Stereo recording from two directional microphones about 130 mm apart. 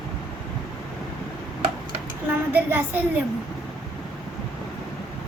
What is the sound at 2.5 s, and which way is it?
Speech, 15° right (ahead or behind).